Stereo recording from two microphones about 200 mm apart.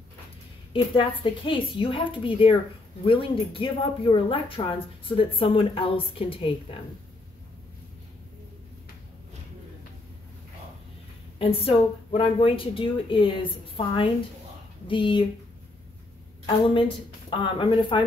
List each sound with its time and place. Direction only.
0.9 s a woman's voice: 25° left (ahead or behind)
11.3 s a woman's voice: 30° left (ahead or behind)
16.4 s a woman's voice: 25° left (ahead or behind)